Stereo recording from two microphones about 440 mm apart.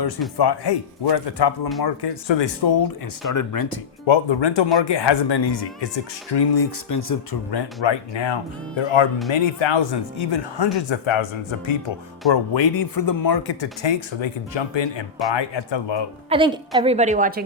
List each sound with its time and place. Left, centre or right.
0.3 s speech: left
3.3 s speech: left
4.0 s speech: left
7.5 s speech: left
12.3 s speech: left
16.3 s a woman's voice: centre